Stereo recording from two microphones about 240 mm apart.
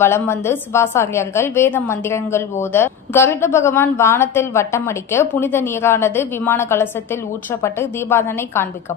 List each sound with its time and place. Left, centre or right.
0.0 s a woman's voice: centre